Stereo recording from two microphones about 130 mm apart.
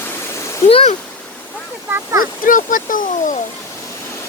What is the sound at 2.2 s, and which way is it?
Speech, 90° left.